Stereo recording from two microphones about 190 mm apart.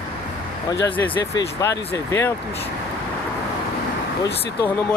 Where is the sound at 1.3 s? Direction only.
15° left (ahead or behind).